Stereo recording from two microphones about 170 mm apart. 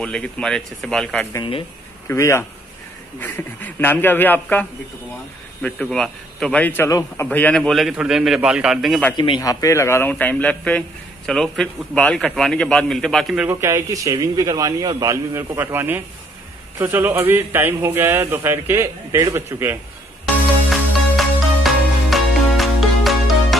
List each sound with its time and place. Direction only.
0.0 s a man's voice: 5° left (ahead or behind)
1.3 s a man's voice: 30° left (ahead or behind)
2.0 s speech: 15° left (ahead or behind)
6.9 s a man's voice: 20° left (ahead or behind)
7.2 s a man's voice: 5° left (ahead or behind)
9.1 s a man's voice: 25° left (ahead or behind); by 13.5 s centre (ahead or behind)
13.5 s a man's voice: 15° right (ahead or behind)
20.7 s music: centre (ahead or behind)